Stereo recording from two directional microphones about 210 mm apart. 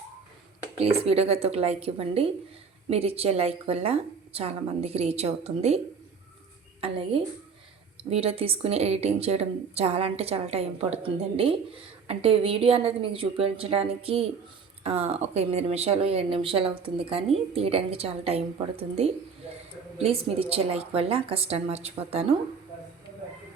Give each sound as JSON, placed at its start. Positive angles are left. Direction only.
{"t": 1.0, "sound": "a woman's voice", "side_deg": -30}
{"t": 8.1, "sound": "a woman's voice", "side_deg": -30}